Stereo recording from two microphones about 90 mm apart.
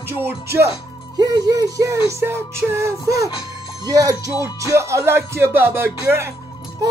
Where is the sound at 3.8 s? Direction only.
45° right (ahead or behind).